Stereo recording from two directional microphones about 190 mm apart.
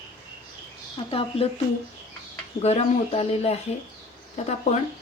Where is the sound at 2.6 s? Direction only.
35° left (ahead or behind).